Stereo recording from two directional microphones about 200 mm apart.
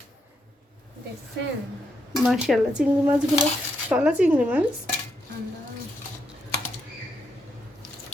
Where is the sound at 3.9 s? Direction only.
5° right (ahead or behind).